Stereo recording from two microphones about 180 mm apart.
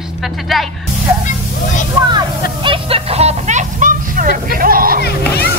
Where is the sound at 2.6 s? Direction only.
30° right (ahead or behind); by 5.0 s 55° right (ahead or behind).